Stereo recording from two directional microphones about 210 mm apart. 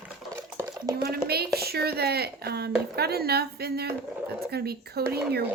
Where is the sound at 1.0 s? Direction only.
50° right (ahead or behind).